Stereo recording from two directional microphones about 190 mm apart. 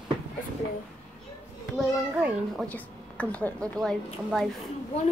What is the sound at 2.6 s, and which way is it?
A woman's voice, 5° left (ahead or behind).